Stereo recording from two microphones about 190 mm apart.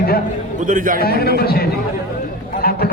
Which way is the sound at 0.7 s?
45° right (ahead or behind).